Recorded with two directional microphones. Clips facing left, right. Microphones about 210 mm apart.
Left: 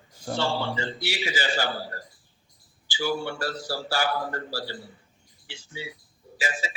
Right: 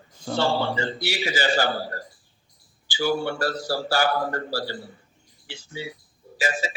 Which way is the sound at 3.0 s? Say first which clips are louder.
Right 4 dB; 55° right (ahead or behind).